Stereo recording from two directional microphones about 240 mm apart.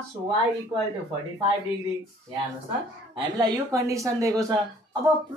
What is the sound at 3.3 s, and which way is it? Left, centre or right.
A woman's voice, centre.